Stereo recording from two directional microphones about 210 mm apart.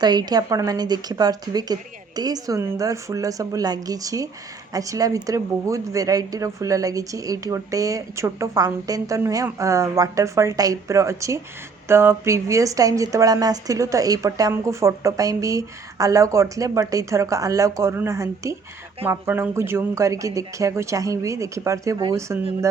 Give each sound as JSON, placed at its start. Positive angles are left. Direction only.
{"t": 0.0, "sound": "speech", "side_deg": -20}